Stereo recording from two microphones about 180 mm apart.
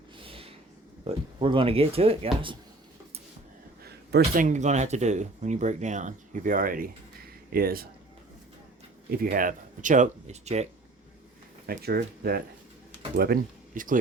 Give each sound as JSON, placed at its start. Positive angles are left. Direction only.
{"t": 0.2, "sound": "a sound", "side_deg": -30}
{"t": 1.0, "sound": "speech", "side_deg": -30}
{"t": 3.8, "sound": "a sound", "side_deg": -60}
{"t": 4.4, "sound": "speech", "side_deg": -40}
{"t": 9.0, "sound": "speech", "side_deg": -55}
{"t": 11.6, "sound": "speech", "side_deg": -60}